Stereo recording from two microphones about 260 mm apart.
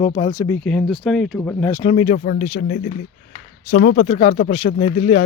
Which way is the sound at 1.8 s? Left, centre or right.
Left.